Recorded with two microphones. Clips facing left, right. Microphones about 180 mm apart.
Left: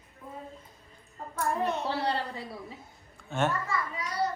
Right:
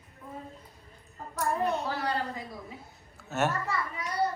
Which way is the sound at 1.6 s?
35° left (ahead or behind).